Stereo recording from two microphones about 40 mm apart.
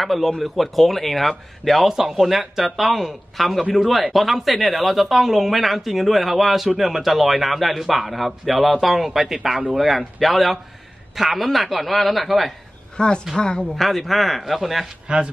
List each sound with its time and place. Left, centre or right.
0.0 s speech: centre
12.9 s speech: left
13.7 s speech: centre
15.1 s speech: right